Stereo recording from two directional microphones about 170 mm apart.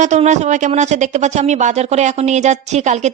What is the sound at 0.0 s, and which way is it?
Speech, 45° right (ahead or behind).